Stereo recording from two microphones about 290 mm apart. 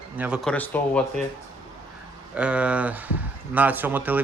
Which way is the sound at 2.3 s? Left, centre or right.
Centre.